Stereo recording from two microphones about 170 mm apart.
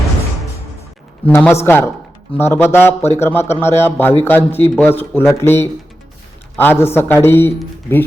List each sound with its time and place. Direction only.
1.3 s a man's voice: 15° left (ahead or behind)